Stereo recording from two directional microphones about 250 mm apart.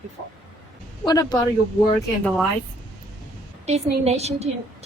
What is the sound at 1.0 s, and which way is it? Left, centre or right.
Speech, centre.